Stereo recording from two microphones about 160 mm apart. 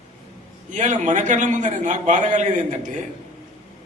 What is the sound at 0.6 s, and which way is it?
A man's voice, 50° right (ahead or behind).